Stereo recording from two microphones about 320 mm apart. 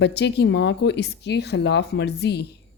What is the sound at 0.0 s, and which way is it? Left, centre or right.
Speech, left.